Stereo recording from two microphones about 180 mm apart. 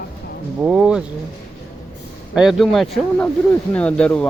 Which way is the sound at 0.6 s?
5° right (ahead or behind).